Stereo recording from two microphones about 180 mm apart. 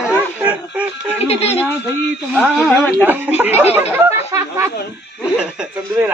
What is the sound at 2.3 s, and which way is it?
Speech, 5° left (ahead or behind).